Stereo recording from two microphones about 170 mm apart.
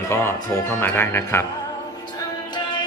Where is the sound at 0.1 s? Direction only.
15° left (ahead or behind).